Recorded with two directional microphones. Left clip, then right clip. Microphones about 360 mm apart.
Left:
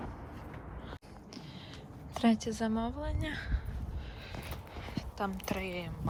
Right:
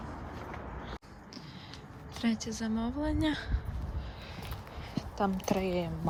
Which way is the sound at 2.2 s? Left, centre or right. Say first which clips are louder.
Left 4 dB; centre.